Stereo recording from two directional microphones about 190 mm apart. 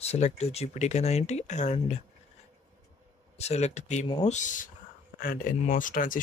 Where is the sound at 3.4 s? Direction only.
35° left (ahead or behind).